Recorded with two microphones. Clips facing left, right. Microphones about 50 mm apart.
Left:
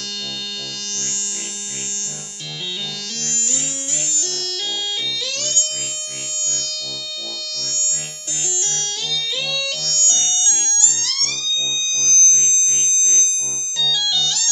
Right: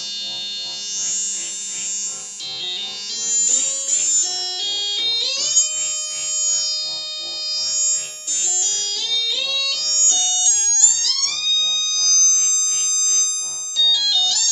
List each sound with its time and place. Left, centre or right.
5.1 s music: left
8.5 s music: left
11.5 s music: left